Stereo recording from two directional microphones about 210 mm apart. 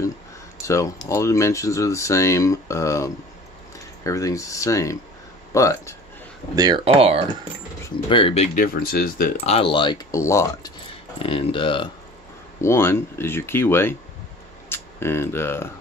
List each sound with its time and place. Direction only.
0.6 s a sound: 15° left (ahead or behind)
1.0 s speech: 15° left (ahead or behind)
6.5 s speech: 20° right (ahead or behind)
8.1 s speech: 25° left (ahead or behind)
8.5 s speech: 45° left (ahead or behind)
9.5 s speech: 25° left (ahead or behind)
11.1 s speech: 25° left (ahead or behind)
12.5 s speech: 10° left (ahead or behind)